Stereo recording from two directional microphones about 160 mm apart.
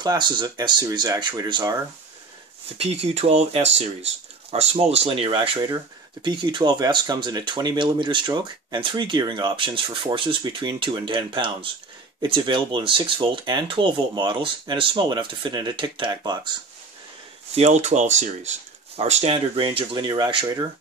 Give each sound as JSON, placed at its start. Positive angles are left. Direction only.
{"t": 0.0, "sound": "speech", "side_deg": -25}
{"t": 2.8, "sound": "speech", "side_deg": -40}
{"t": 17.6, "sound": "speech", "side_deg": -45}